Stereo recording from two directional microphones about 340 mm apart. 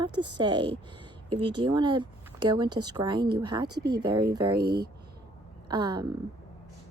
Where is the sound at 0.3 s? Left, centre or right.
Centre.